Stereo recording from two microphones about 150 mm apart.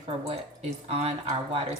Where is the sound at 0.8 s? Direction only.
40° right (ahead or behind).